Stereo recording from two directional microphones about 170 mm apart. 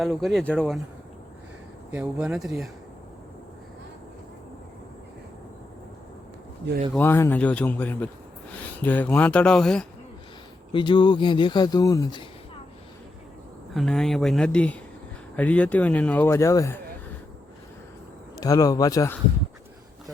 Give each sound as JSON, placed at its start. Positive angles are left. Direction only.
{"t": 0.0, "sound": "speech", "side_deg": 0}
{"t": 1.9, "sound": "speech", "side_deg": -5}
{"t": 6.9, "sound": "speech", "side_deg": 15}
{"t": 10.7, "sound": "speech", "side_deg": 30}
{"t": 13.7, "sound": "speech", "side_deg": 0}
{"t": 18.3, "sound": "speech", "side_deg": 20}